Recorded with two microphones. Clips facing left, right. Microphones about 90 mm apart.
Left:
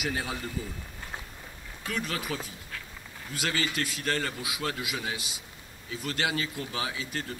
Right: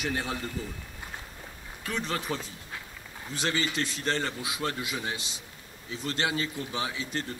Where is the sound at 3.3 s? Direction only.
25° right (ahead or behind).